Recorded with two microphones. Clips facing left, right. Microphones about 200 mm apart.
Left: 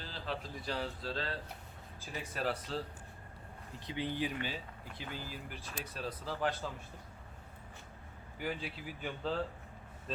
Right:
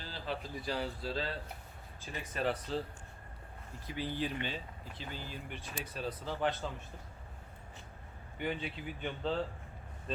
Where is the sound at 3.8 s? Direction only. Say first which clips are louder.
Even; 20° left (ahead or behind); by 6.7 s centre (ahead or behind).